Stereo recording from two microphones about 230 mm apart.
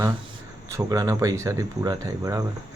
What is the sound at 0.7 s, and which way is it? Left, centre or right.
Speech, centre.